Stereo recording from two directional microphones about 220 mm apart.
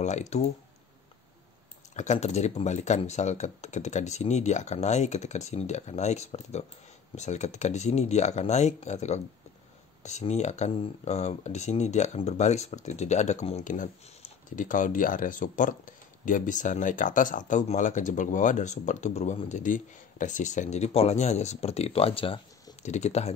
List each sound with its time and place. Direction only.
0.0 s speech: 30° left (ahead or behind)
2.0 s speech: 30° left (ahead or behind)